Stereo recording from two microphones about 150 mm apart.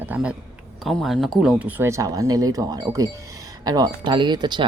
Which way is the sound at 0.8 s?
Centre (ahead or behind).